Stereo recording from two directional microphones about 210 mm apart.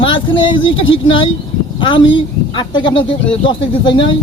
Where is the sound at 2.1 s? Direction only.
20° left (ahead or behind).